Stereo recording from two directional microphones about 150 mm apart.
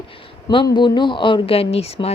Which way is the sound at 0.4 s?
30° left (ahead or behind).